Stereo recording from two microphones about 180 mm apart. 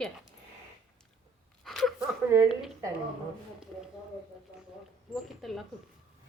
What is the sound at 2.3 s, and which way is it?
Speech, 15° right (ahead or behind).